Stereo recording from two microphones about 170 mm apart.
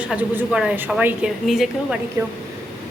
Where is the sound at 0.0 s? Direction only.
5° right (ahead or behind).